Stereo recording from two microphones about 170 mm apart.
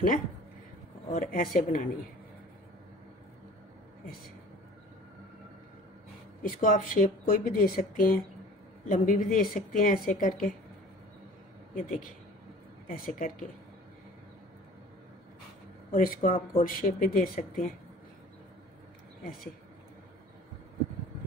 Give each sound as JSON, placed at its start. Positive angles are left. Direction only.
{"t": 1.1, "sound": "a woman's voice", "side_deg": 55}
{"t": 6.4, "sound": "a woman's voice", "side_deg": 55}
{"t": 11.7, "sound": "a woman's voice", "side_deg": 50}
{"t": 15.9, "sound": "a woman's voice", "side_deg": 55}